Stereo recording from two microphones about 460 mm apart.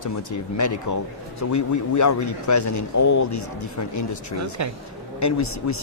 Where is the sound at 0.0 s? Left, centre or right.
Left.